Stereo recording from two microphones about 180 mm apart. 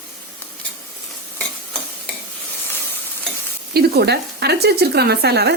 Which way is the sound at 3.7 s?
65° right (ahead or behind).